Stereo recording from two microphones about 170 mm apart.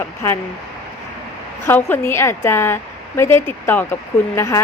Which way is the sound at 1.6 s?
15° left (ahead or behind).